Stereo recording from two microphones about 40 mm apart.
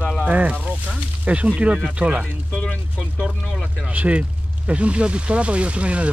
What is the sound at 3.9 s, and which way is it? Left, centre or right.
Speech, right.